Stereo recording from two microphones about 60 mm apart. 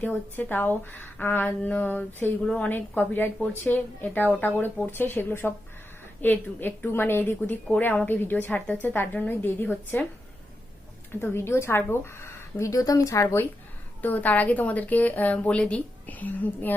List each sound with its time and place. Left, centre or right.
0.0 s a woman's voice: left
2.4 s a woman's voice: centre
2.6 s a woman's voice: left
11.1 s speech: left
14.0 s a woman's voice: left